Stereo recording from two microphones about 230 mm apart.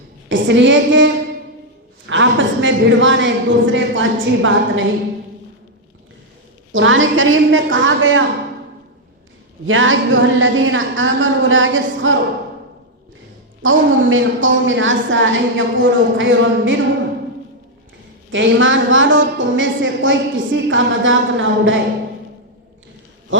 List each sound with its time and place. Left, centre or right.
0.3 s a woman's voice: right
2.0 s a sound: right
6.7 s a woman's voice: right
9.6 s a woman's voice: right
13.6 s a woman's voice: right
18.3 s a woman's voice: right